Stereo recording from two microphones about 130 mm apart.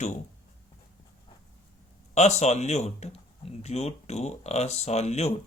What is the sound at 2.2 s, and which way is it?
Speech, 55° left (ahead or behind).